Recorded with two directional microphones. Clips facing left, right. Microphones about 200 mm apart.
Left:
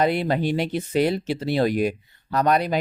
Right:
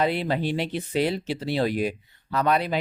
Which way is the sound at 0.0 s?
50° left (ahead or behind).